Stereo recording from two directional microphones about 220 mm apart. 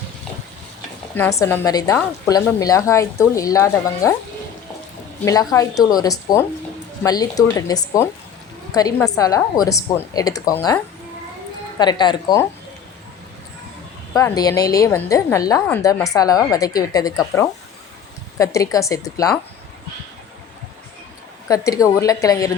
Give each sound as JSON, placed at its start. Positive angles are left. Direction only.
{"t": 1.1, "sound": "a woman's voice", "side_deg": 10}
{"t": 5.2, "sound": "a woman's voice", "side_deg": 15}
{"t": 11.8, "sound": "speech", "side_deg": 20}
{"t": 14.1, "sound": "a woman's voice", "side_deg": 15}
{"t": 21.4, "sound": "a woman's voice", "side_deg": 15}